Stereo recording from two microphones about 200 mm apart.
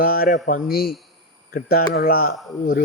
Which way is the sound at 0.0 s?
45° left (ahead or behind).